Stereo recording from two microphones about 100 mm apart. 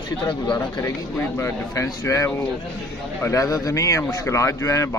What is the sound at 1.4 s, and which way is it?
Speech, 30° left (ahead or behind).